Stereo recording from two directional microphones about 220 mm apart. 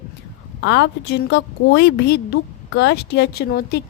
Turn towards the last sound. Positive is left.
turn(degrees=45)  # may be behind; listen again after turning